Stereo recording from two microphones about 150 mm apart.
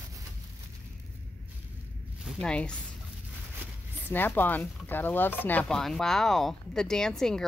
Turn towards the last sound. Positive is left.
turn(degrees=5)  # may be behind; listen again after turning